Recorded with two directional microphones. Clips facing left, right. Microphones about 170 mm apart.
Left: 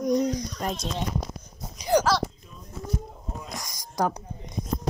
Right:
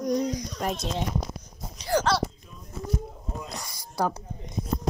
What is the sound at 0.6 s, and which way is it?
Speech, 5° right (ahead or behind).